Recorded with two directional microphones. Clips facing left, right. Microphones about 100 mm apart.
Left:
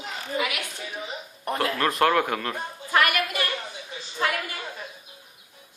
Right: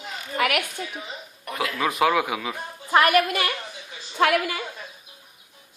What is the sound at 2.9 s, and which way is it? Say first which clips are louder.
Speech: right 5 dB; 35° right (ahead or behind).